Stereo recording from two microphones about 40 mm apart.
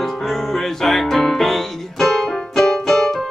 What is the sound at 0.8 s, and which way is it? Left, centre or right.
Music, centre.